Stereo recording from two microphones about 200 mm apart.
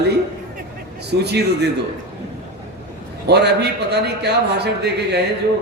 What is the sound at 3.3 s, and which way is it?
A man's voice, 55° right (ahead or behind).